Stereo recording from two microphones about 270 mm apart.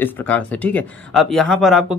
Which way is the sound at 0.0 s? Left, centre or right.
Centre.